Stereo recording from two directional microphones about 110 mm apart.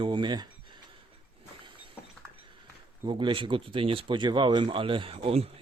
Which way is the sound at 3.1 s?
45° right (ahead or behind).